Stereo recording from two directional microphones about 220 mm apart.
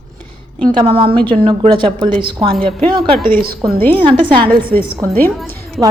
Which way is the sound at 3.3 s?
45° right (ahead or behind).